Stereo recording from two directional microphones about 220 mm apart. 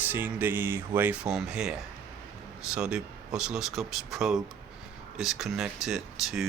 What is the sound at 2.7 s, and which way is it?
Speech, 5° right (ahead or behind).